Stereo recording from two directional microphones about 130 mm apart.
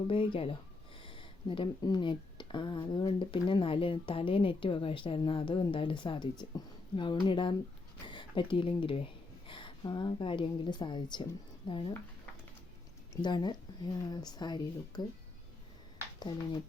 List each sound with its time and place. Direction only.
0.1 s speech: 45° left (ahead or behind)
13.2 s speech: 35° left (ahead or behind)